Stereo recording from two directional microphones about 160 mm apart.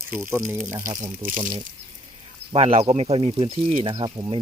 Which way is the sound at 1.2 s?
55° right (ahead or behind).